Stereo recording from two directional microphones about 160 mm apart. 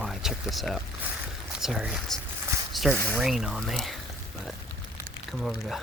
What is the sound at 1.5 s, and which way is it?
Speech, 5° right (ahead or behind).